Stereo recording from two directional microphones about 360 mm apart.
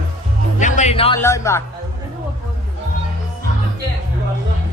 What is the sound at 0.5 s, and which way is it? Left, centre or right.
Music, left.